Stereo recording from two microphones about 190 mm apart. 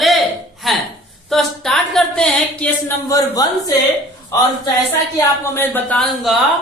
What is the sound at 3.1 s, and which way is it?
Speech, 20° left (ahead or behind).